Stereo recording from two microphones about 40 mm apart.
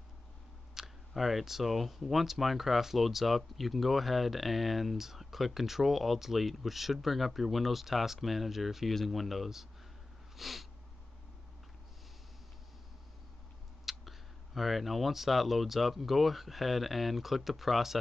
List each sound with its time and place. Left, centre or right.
0.7 s speech: centre
10.3 s a sound: centre
13.8 s speech: centre